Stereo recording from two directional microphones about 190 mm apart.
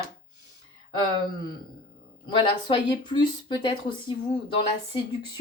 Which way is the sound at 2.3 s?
25° left (ahead or behind).